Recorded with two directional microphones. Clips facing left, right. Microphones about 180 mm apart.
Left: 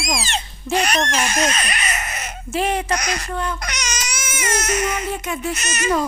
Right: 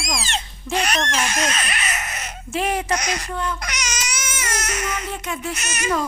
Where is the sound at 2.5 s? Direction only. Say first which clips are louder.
Left 2 dB; 30° left (ahead or behind).